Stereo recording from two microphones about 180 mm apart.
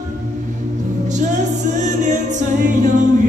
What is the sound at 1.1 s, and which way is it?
Music, 40° right (ahead or behind).